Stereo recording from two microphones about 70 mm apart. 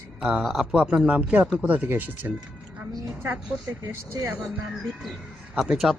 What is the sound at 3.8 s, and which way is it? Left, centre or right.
Speech, right.